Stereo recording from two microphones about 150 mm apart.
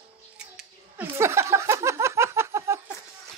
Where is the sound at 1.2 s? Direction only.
20° right (ahead or behind).